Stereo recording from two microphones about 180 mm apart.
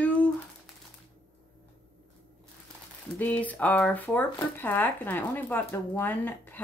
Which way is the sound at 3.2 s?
10° left (ahead or behind).